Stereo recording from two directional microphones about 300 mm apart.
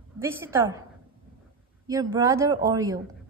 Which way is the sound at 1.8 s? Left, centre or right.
Centre.